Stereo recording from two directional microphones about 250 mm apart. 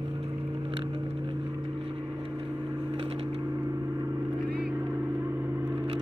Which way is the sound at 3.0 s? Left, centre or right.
Right.